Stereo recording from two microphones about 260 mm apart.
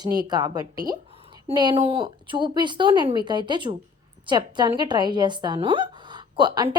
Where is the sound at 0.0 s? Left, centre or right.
Centre.